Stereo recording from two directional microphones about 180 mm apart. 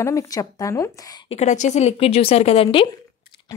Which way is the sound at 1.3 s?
40° left (ahead or behind).